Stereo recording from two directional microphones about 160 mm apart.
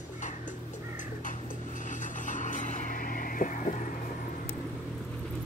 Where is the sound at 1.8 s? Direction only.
55° left (ahead or behind).